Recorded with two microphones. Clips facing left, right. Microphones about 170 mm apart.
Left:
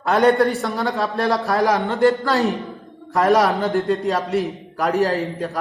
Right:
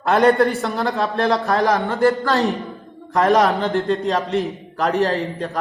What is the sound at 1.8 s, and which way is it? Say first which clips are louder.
Speech: even; 20° left (ahead or behind).